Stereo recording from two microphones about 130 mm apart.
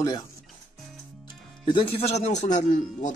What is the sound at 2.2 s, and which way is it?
Speech, 65° left (ahead or behind).